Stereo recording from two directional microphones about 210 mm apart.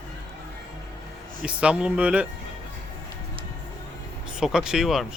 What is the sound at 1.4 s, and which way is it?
Speech, 5° right (ahead or behind).